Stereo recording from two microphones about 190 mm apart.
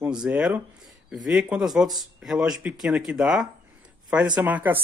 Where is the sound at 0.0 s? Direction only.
5° right (ahead or behind).